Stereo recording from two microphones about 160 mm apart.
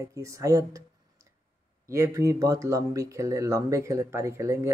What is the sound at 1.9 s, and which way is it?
Speech, 20° right (ahead or behind).